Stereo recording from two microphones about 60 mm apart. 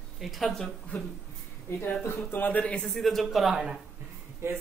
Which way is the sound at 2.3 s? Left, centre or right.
Left.